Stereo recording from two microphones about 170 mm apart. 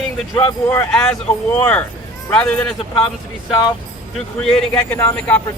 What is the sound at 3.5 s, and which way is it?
Speech, 25° left (ahead or behind).